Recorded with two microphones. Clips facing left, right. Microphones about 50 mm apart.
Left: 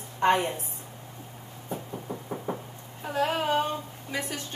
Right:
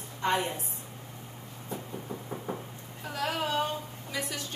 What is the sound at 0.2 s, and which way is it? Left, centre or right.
Speech, left.